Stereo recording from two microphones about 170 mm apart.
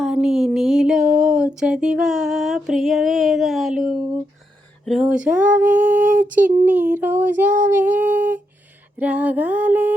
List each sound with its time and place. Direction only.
0.0 s a sound: centre (ahead or behind)
4.9 s female singing: 5° right (ahead or behind)
7.7 s child singing: 10° right (ahead or behind)
9.0 s female singing: 10° right (ahead or behind)